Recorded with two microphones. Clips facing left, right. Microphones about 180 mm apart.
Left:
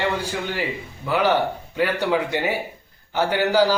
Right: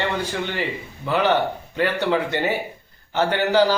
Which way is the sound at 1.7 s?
10° left (ahead or behind).